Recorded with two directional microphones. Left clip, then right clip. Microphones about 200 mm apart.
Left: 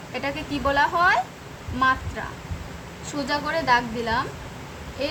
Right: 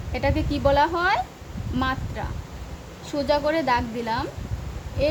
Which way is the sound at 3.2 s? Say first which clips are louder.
Right 2 dB; 30° right (ahead or behind).